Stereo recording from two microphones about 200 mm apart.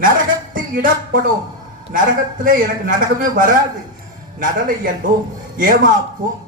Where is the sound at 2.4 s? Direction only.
40° right (ahead or behind).